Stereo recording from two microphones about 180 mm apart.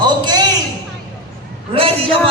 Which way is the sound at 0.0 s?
25° right (ahead or behind).